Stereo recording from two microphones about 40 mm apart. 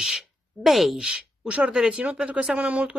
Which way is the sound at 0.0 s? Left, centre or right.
Centre.